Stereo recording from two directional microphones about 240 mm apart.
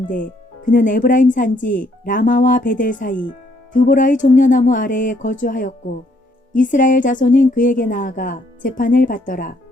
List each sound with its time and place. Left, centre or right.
0.1 s speech: left